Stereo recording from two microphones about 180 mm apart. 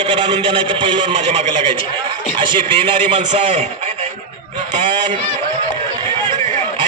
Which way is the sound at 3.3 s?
40° right (ahead or behind).